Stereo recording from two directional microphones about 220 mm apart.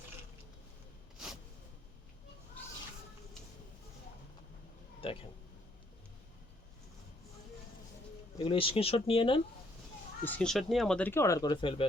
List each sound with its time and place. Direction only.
5.0 s speech: 25° left (ahead or behind)
8.4 s speech: 25° left (ahead or behind)
10.2 s speech: 5° left (ahead or behind); by 11.9 s 20° left (ahead or behind)